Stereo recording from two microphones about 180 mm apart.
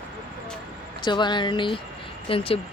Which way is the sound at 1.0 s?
25° left (ahead or behind).